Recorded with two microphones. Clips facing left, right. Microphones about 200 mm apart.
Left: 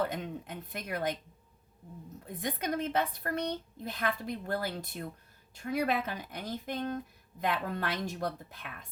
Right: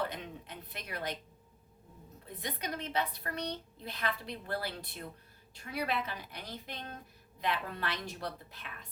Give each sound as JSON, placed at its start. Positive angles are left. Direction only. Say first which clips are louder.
{"t": 0.0, "sound": "a woman's voice", "louder": "left 5 dB", "side_deg": 45}
{"t": 2.2, "sound": "a woman's voice", "louder": "left 5 dB", "side_deg": 50}